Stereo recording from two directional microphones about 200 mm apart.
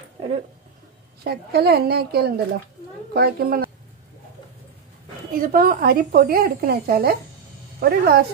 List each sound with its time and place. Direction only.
1.2 s a woman's voice: 55° right (ahead or behind)
5.3 s a woman's voice: 45° right (ahead or behind)